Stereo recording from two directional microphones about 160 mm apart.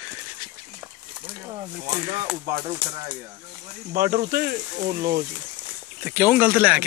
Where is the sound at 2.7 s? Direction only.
30° right (ahead or behind).